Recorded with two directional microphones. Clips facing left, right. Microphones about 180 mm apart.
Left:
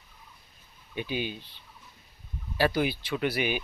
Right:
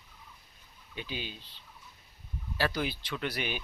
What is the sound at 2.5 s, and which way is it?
Speech, 15° left (ahead or behind).